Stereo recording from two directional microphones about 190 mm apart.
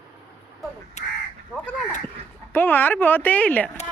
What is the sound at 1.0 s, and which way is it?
Speech, 40° left (ahead or behind).